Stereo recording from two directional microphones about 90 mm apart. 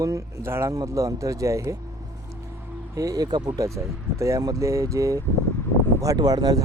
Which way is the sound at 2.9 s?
40° right (ahead or behind).